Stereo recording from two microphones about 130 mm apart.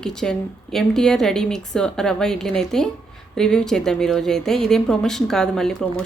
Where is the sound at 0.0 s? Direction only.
5° left (ahead or behind).